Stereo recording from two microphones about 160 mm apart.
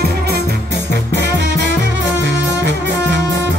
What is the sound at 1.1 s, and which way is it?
Music, 90° right.